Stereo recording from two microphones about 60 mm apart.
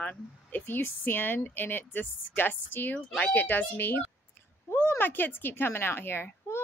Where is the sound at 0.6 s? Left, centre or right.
Left.